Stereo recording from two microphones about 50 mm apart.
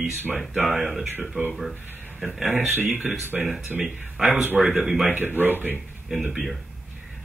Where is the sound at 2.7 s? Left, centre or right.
Right.